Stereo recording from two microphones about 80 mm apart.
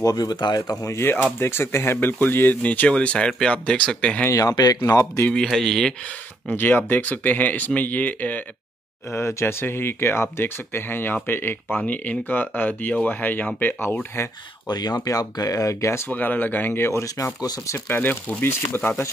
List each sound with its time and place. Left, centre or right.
0.0 s speech: left
0.9 s speech: left
4.3 s speech: left
4.6 s speech: left
5.3 s speech: centre
6.5 s speech: left
9.1 s speech: left
14.7 s speech: left
16.1 s speech: left
17.2 s speech: left
17.8 s speech: left